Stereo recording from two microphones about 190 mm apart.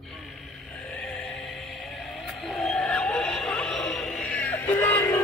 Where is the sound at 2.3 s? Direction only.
Centre (ahead or behind).